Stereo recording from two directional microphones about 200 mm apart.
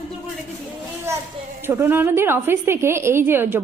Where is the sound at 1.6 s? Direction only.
10° right (ahead or behind).